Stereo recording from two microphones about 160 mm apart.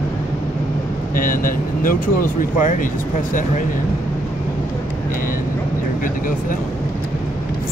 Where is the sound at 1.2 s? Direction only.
60° left (ahead or behind).